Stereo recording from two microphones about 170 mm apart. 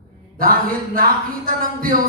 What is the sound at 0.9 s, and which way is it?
Speech, 55° right (ahead or behind).